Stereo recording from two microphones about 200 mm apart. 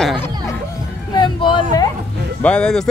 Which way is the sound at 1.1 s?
25° left (ahead or behind).